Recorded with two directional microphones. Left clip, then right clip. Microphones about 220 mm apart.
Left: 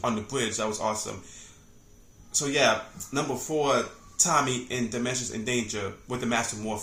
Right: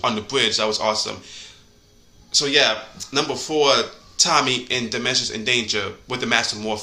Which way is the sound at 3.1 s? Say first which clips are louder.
Right 7 dB; 5° left (ahead or behind).